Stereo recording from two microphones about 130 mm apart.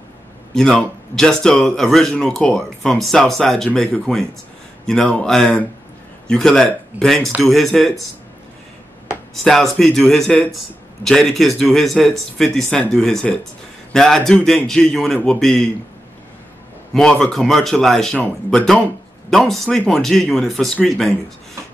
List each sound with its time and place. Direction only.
0.6 s a man's voice: 5° left (ahead or behind)
9.3 s speech: centre (ahead or behind)
11.0 s a man's voice: 15° left (ahead or behind)
11.3 s speech: centre (ahead or behind)
16.9 s speech: 5° left (ahead or behind)